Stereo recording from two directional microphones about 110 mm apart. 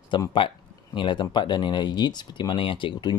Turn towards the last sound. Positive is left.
turn(degrees=50)  # may be behind; listen again after turning